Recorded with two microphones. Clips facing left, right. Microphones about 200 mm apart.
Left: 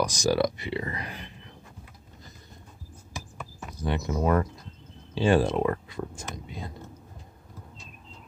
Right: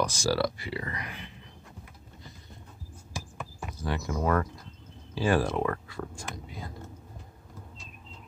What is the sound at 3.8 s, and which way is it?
Speech, 20° left (ahead or behind).